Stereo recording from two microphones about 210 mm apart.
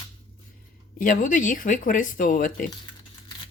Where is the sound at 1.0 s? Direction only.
40° left (ahead or behind).